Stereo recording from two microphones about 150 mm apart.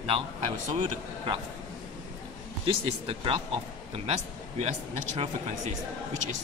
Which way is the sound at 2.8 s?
40° right (ahead or behind).